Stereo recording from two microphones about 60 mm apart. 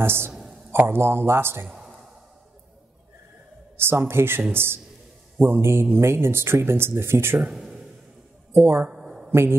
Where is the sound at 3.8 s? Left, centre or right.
Right.